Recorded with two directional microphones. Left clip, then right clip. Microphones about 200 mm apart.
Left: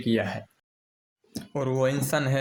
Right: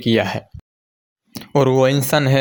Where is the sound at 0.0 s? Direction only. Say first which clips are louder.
Right 9 dB; 50° right (ahead or behind).